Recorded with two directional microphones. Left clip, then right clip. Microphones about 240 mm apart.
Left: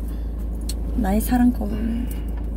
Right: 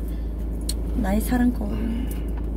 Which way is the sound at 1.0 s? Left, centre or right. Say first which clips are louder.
Left 3 dB; centre.